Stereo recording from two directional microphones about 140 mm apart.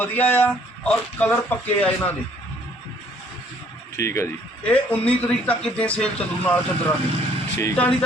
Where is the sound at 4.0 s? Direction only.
20° left (ahead or behind).